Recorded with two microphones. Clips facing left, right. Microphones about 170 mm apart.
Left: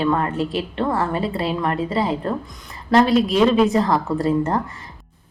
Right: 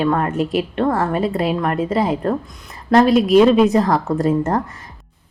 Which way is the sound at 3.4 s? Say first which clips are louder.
Right 4 dB; 5° right (ahead or behind).